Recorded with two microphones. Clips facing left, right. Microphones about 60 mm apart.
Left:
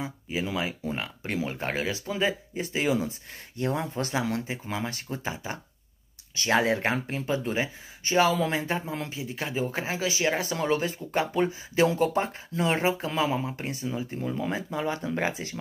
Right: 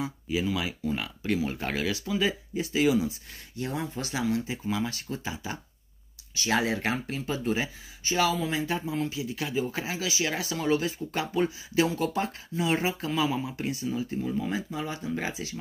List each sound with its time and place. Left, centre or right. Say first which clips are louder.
0.0 s speech: right 2 dB; left
14.5 s speech: left 3 dB; left